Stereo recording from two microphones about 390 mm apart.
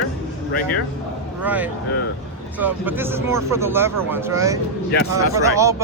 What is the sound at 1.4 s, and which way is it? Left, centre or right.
Speech, centre.